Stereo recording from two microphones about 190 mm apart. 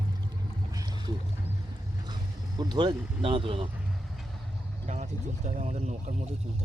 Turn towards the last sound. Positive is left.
turn(degrees=-35)  # may be behind; listen again after turning